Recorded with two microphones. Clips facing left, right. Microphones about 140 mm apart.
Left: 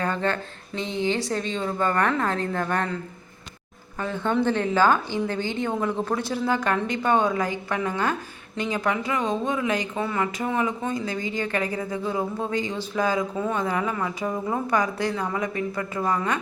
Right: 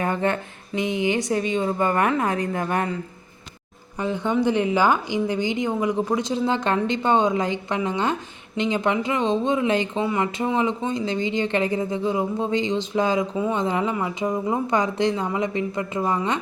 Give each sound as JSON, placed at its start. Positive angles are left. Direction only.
{"t": 0.0, "sound": "a sound", "side_deg": -15}
{"t": 0.8, "sound": "a woman's voice", "side_deg": -15}
{"t": 4.0, "sound": "a woman's voice", "side_deg": -15}
{"t": 13.3, "sound": "a woman's voice", "side_deg": -10}
{"t": 13.6, "sound": "speech", "side_deg": -20}